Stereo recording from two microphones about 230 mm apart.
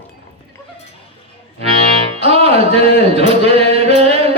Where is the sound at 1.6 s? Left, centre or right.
Right.